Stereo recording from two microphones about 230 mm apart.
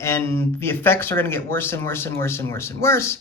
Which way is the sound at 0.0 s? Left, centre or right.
Centre.